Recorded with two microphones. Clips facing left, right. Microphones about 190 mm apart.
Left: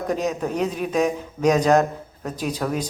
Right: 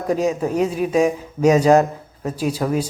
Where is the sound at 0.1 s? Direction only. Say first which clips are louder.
Right 6 dB; 10° right (ahead or behind).